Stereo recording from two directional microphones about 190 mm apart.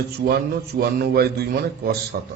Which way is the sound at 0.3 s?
55° right (ahead or behind).